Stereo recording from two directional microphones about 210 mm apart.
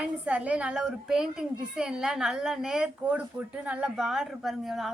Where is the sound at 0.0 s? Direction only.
5° right (ahead or behind).